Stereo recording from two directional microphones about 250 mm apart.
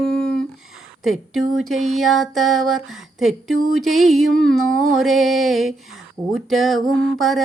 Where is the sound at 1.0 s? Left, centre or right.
Centre.